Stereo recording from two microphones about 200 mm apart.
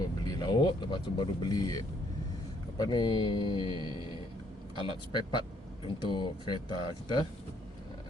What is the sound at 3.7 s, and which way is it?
Music, 20° right (ahead or behind).